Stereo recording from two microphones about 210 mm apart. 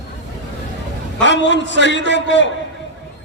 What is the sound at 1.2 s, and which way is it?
A man's voice, 60° left (ahead or behind).